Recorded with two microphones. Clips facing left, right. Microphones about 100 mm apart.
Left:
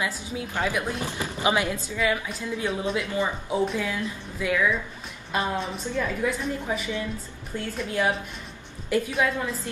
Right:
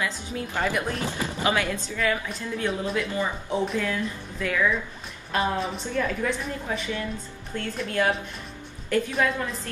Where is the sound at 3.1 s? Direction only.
15° left (ahead or behind).